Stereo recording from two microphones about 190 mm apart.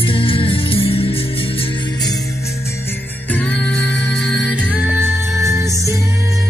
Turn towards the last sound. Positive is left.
turn(degrees=-15)  # may be behind; listen again after turning